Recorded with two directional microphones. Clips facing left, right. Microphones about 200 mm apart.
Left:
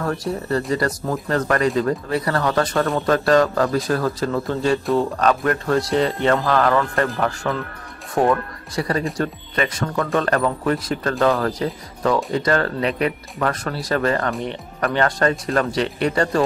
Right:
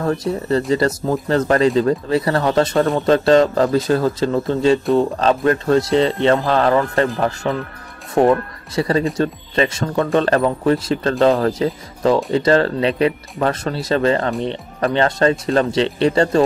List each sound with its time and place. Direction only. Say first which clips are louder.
0.0 s speech: right 4 dB; 20° right (ahead or behind)